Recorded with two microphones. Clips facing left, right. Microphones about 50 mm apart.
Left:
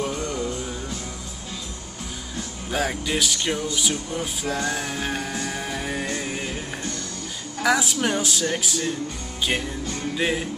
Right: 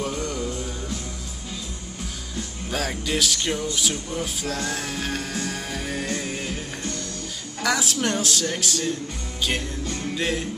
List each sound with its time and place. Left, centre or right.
0.0 s music: centre
2.7 s speech: centre
4.4 s music: centre
7.6 s speech: centre
9.4 s music: centre